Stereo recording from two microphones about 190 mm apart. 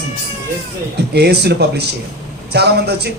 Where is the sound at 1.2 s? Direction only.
60° right (ahead or behind).